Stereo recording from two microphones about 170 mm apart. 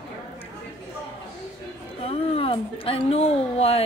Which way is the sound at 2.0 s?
35° left (ahead or behind).